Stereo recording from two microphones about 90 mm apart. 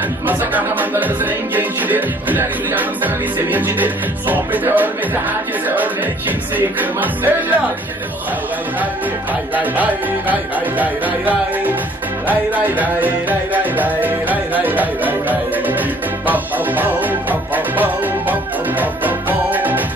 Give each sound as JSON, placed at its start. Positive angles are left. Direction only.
{"t": 0.3, "sound": "music", "side_deg": -20}
{"t": 6.8, "sound": "music", "side_deg": -20}
{"t": 9.6, "sound": "music", "side_deg": -20}